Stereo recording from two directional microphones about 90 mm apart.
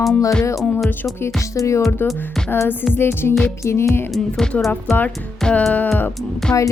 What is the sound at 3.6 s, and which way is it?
Speech, 30° left (ahead or behind).